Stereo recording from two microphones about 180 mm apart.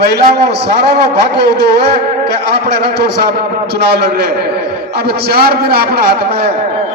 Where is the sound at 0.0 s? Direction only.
65° right (ahead or behind).